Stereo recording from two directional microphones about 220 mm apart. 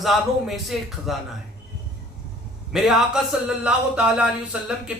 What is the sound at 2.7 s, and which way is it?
A man's voice, centre (ahead or behind).